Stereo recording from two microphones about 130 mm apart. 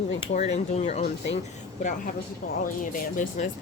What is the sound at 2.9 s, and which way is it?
Speech, 85° left.